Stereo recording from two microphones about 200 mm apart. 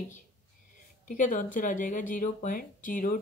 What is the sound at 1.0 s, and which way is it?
Speech, 40° left (ahead or behind).